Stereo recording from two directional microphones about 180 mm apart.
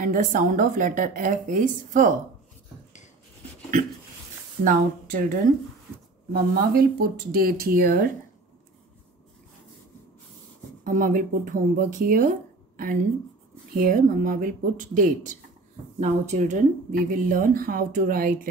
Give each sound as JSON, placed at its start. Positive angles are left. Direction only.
{"t": 0.0, "sound": "speech", "side_deg": -50}
{"t": 4.6, "sound": "speech", "side_deg": -50}
{"t": 6.5, "sound": "speech", "side_deg": -55}
{"t": 10.8, "sound": "speech", "side_deg": -50}